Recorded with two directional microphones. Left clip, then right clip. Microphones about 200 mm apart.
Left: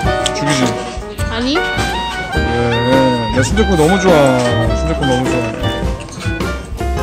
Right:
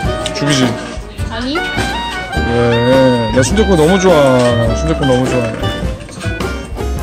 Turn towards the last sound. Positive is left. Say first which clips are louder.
# right 1 dB
turn(degrees=0)  # may be behind; listen again after turning